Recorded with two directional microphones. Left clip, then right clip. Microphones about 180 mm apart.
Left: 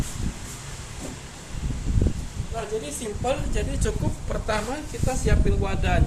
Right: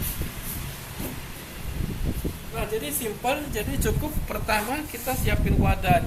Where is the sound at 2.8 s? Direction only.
25° left (ahead or behind).